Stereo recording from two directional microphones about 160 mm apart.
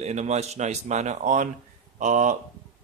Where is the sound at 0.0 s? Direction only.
45° right (ahead or behind).